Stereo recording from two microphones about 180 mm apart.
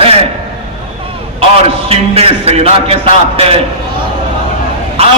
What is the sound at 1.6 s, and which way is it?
A man's voice, 35° right (ahead or behind).